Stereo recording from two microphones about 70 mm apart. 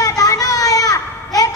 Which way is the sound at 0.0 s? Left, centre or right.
Left.